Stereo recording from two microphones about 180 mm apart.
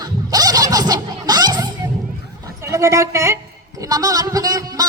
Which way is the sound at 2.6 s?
15° right (ahead or behind).